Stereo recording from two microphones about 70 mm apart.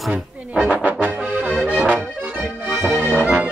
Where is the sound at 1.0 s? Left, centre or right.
Centre.